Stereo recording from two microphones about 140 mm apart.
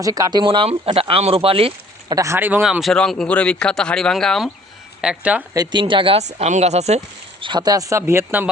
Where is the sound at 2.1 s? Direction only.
20° right (ahead or behind).